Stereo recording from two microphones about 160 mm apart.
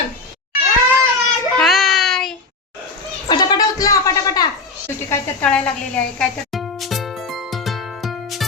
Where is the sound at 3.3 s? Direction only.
25° left (ahead or behind).